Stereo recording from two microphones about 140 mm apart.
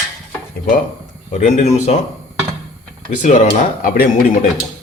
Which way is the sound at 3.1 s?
60° left (ahead or behind).